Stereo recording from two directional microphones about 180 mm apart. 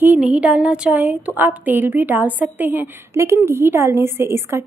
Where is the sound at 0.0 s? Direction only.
5° right (ahead or behind).